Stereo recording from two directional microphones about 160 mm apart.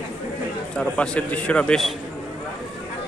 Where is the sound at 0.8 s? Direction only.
5° left (ahead or behind).